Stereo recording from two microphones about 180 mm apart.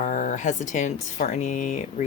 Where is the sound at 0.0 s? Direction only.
45° left (ahead or behind).